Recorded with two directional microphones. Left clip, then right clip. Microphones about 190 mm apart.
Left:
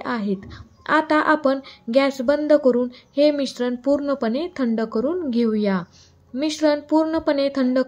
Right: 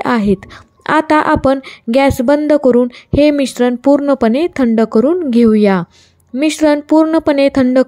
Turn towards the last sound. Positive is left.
turn(degrees=-45)  # may be behind; listen again after turning